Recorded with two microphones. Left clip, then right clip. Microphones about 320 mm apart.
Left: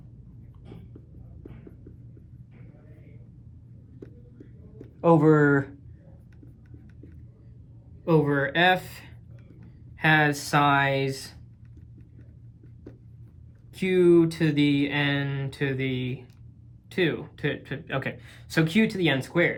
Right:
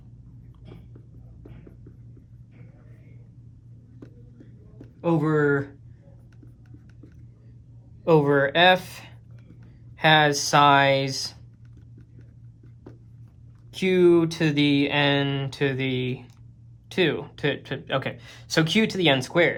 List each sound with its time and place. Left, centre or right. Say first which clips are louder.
4.9 s speech: left 4 dB; centre
8.1 s speech: right 4 dB; centre
13.7 s speech: right 1 dB; centre